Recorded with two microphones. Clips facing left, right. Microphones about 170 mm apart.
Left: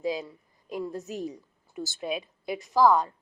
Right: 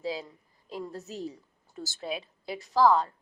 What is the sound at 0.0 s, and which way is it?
A woman's voice, 15° left (ahead or behind).